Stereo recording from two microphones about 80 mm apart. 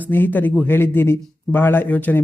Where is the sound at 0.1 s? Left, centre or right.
Left.